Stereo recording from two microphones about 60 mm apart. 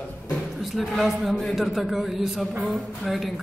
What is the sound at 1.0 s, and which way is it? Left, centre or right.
Speech, centre.